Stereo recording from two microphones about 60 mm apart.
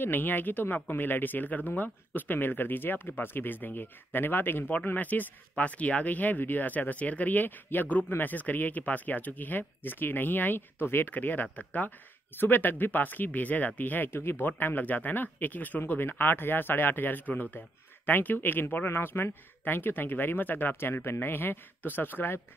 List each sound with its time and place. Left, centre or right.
0.0 s speech: left